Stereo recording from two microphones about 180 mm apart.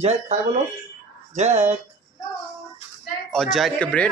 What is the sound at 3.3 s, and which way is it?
Speech, centre (ahead or behind).